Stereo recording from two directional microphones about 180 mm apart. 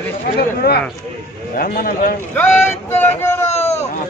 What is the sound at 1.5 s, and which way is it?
Speech, 55° left (ahead or behind).